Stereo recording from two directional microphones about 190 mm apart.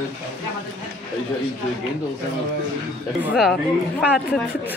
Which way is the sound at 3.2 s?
Centre (ahead or behind).